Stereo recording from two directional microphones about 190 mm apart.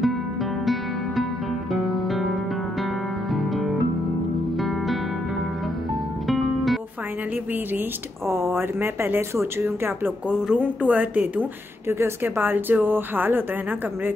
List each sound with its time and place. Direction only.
1.7 s music: centre (ahead or behind)
3.3 s music: centre (ahead or behind)
6.2 s music: centre (ahead or behind)
8.3 s speech: 15° right (ahead or behind)